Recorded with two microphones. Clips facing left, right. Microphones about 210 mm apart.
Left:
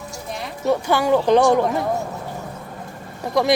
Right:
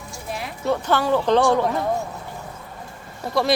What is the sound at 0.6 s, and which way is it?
Speech, 10° left (ahead or behind).